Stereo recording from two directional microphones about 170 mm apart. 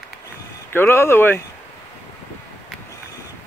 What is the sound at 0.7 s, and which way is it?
Speech, 15° left (ahead or behind).